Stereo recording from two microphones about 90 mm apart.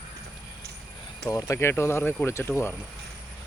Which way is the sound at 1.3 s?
35° left (ahead or behind).